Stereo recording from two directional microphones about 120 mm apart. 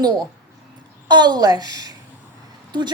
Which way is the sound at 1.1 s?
35° right (ahead or behind).